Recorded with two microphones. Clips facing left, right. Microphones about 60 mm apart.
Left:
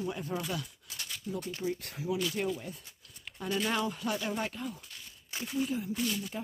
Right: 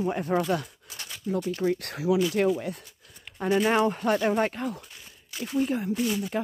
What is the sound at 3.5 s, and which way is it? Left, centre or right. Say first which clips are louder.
Speech: right 9 dB; right.